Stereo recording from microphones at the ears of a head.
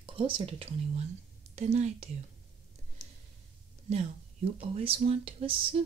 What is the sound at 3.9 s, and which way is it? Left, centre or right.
Speech, right.